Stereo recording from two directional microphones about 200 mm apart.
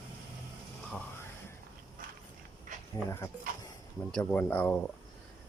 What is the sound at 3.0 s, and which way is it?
Speech, 15° left (ahead or behind).